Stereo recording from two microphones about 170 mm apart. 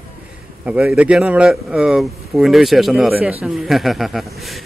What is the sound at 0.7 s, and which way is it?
A man's voice, 5° right (ahead or behind).